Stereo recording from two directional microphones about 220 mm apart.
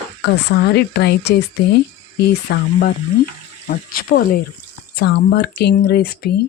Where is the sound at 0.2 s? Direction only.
55° left (ahead or behind).